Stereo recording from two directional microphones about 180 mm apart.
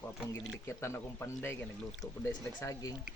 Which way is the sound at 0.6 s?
15° left (ahead or behind).